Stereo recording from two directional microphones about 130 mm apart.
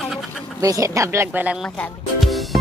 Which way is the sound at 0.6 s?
25° right (ahead or behind).